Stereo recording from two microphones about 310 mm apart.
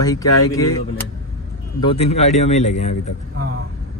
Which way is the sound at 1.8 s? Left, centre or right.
Centre.